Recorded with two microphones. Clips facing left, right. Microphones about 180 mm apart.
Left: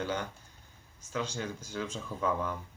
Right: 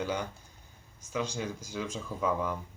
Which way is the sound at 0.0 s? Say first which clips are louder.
Right 1 dB; 10° right (ahead or behind).